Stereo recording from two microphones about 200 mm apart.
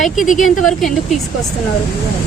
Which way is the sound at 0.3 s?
40° left (ahead or behind).